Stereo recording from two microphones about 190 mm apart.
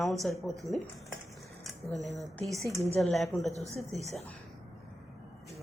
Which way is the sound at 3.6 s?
35° right (ahead or behind).